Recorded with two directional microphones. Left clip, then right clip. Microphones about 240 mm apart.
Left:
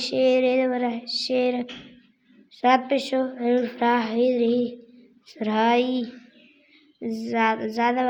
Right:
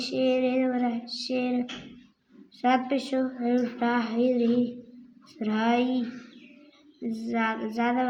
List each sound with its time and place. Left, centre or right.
0.0 s a woman's voice: left
7.1 s a woman's voice: left